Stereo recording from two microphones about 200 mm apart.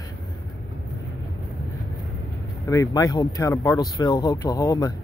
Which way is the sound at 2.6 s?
15° left (ahead or behind).